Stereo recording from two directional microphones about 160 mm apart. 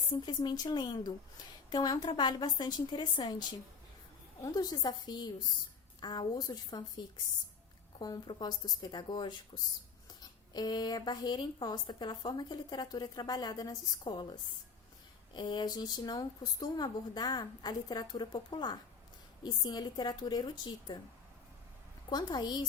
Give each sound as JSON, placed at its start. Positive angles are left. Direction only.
{"t": 0.3, "sound": "speech", "side_deg": 25}
{"t": 4.5, "sound": "speech", "side_deg": 25}
{"t": 22.1, "sound": "speech", "side_deg": 25}